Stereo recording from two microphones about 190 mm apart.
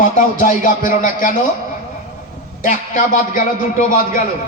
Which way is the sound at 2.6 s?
45° left (ahead or behind).